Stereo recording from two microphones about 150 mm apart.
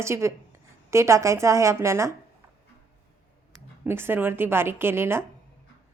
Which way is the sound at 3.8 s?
15° right (ahead or behind).